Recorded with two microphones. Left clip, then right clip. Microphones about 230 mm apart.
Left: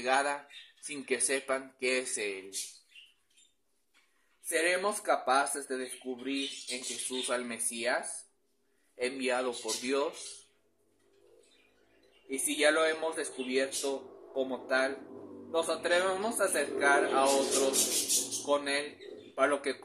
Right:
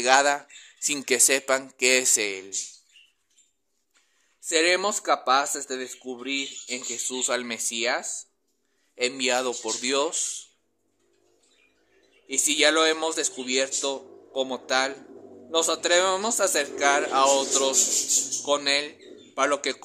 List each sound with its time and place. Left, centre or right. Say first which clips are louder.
0.0 s speech: right 10 dB; right
4.5 s speech: right 7 dB; right
12.3 s speech: right 7 dB; right